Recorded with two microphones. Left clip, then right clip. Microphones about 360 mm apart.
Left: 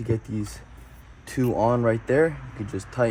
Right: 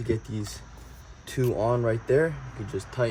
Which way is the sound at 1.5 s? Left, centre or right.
Centre.